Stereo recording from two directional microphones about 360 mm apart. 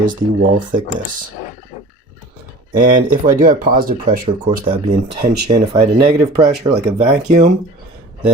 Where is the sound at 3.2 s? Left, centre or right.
Right.